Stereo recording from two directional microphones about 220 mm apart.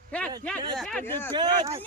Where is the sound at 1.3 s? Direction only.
20° right (ahead or behind).